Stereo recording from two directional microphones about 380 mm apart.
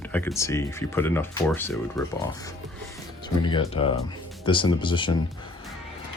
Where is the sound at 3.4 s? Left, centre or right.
Centre.